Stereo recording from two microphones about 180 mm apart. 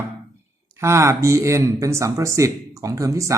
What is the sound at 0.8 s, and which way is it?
Speech, 15° right (ahead or behind).